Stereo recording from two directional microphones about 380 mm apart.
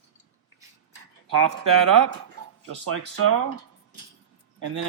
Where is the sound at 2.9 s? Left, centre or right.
Right.